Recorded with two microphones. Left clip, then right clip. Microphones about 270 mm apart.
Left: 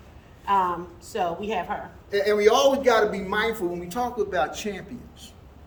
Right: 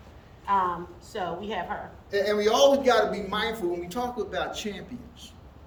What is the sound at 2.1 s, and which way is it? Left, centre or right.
A man's voice, centre.